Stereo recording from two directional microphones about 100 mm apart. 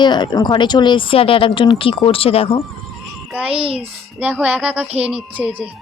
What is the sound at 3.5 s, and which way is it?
Speech, 70° right (ahead or behind).